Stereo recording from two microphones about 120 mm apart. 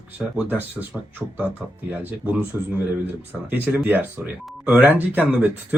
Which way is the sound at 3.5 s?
15° right (ahead or behind).